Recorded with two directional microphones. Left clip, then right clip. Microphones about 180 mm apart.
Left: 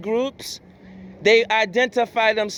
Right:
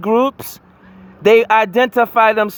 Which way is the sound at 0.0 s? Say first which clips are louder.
Right 8 dB; 60° right (ahead or behind).